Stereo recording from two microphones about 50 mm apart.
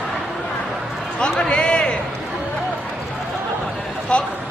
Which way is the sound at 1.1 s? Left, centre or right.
Centre.